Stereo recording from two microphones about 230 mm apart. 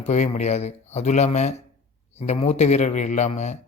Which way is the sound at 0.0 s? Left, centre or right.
Left.